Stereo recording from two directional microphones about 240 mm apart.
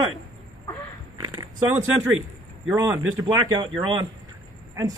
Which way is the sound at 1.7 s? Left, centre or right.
Centre.